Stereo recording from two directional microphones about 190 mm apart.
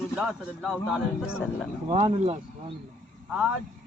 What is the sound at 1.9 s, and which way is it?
Speech, 30° right (ahead or behind).